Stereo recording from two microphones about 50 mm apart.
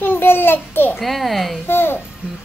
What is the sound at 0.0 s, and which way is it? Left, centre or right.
Babbling, left.